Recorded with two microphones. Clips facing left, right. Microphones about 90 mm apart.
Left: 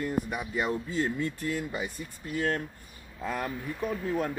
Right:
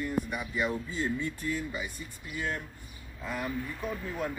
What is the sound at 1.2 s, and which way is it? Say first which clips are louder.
Speech: left 2 dB; 55° left (ahead or behind).